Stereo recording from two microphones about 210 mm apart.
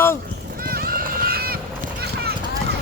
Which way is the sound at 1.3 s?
45° right (ahead or behind).